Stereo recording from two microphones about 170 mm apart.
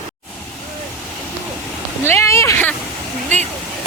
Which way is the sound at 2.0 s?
15° left (ahead or behind).